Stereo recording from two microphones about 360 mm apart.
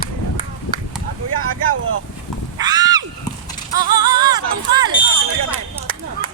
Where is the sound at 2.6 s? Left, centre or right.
Centre.